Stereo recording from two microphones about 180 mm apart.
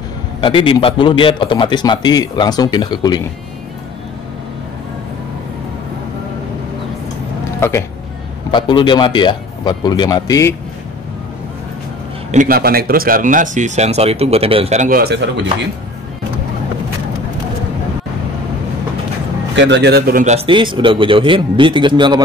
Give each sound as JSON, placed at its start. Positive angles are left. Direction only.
{"t": 0.4, "sound": "a man's voice", "side_deg": 30}
{"t": 8.5, "sound": "a man's voice", "side_deg": 25}
{"t": 12.3, "sound": "speech", "side_deg": -50}
{"t": 19.5, "sound": "a man's voice", "side_deg": -80}
{"t": 20.2, "sound": "speech", "side_deg": -30}